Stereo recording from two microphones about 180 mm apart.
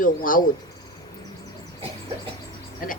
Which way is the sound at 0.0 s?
50° left (ahead or behind).